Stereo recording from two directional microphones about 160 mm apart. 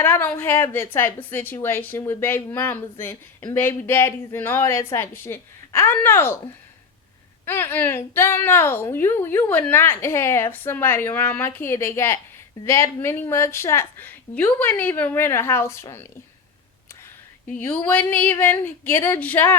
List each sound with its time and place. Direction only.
0.0 s a woman's voice: 15° left (ahead or behind)
7.4 s a woman's voice: 15° left (ahead or behind)
17.6 s a woman's voice: 10° left (ahead or behind)